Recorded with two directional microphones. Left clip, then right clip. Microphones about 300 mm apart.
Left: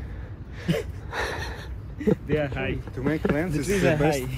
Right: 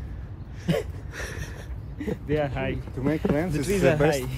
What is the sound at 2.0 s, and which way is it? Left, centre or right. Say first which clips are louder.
Speech: left 2 dB; right.